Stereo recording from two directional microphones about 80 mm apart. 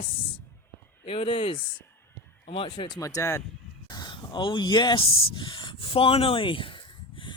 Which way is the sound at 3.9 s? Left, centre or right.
Left.